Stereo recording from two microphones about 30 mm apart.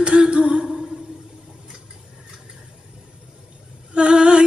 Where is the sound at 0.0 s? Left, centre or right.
Right.